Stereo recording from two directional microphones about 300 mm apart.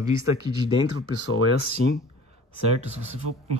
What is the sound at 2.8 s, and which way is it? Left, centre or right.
Speech, right.